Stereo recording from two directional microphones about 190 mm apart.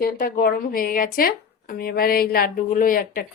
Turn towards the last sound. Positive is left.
turn(degrees=50)  # may be behind; listen again after turning